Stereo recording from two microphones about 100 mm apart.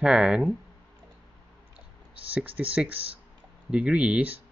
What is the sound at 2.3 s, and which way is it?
Speech, 15° right (ahead or behind).